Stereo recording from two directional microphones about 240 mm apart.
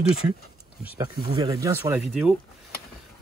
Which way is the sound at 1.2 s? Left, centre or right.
Centre.